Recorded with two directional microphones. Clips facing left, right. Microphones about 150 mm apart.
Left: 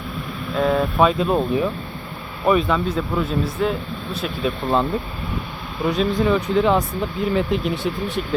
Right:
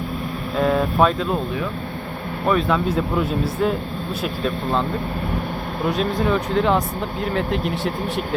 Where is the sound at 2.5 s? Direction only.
Centre (ahead or behind).